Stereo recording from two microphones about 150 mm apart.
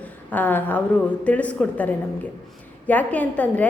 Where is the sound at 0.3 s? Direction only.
10° left (ahead or behind).